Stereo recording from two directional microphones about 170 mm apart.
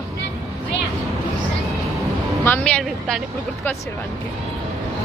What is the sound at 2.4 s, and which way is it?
Speech, 10° left (ahead or behind).